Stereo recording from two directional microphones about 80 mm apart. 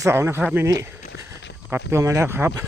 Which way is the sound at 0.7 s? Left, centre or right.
Right.